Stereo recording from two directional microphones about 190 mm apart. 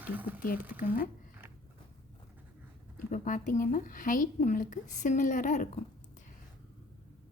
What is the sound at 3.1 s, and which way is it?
Speech, 45° left (ahead or behind).